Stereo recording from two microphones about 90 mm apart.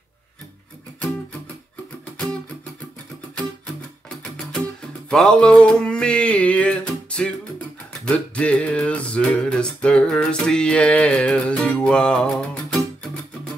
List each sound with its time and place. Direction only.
4.2 s music: 5° left (ahead or behind)
5.1 s a sound: 5° left (ahead or behind)
6.9 s music: 10° left (ahead or behind)